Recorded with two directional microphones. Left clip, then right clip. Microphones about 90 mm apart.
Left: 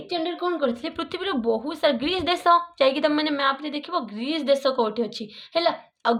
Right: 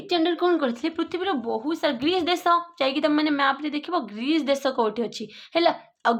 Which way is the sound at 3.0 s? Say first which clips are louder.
Even; 30° right (ahead or behind).